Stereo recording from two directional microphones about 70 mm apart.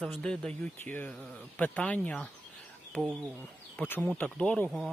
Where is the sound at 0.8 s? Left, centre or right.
Left.